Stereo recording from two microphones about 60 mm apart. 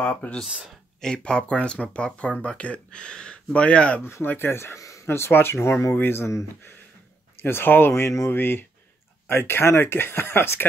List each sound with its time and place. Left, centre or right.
0.0 s speech: left
4.0 s speech: left
4.7 s a sound: left
5.0 s speech: left
8.3 s speech: left